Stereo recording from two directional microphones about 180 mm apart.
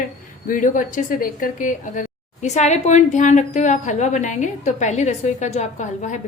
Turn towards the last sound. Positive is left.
turn(degrees=40)  # may be behind; listen again after turning